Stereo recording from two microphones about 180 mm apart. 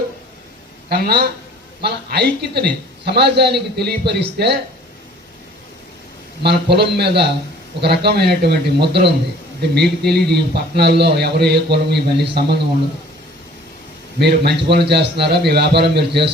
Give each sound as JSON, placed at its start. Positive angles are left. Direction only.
{"t": 0.9, "sound": "a man's voice", "side_deg": -60}
{"t": 6.4, "sound": "a man's voice", "side_deg": -65}
{"t": 14.2, "sound": "a man's voice", "side_deg": -65}